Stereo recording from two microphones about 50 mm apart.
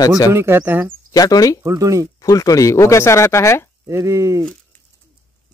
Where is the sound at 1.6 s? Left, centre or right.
Right.